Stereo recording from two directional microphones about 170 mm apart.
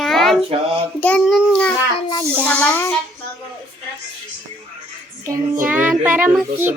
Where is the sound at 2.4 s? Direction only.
10° left (ahead or behind).